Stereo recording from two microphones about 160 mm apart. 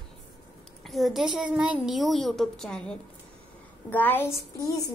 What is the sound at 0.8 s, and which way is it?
A woman's voice, centre (ahead or behind).